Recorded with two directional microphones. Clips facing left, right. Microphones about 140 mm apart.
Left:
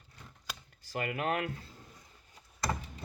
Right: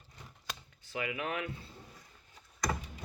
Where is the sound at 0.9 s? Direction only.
50° left (ahead or behind).